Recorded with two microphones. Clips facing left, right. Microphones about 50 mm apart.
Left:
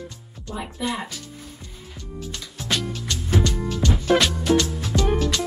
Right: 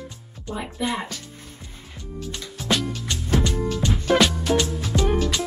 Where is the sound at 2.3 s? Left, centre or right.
Centre.